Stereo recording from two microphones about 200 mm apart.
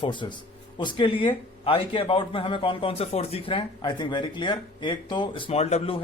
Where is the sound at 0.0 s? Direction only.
25° left (ahead or behind).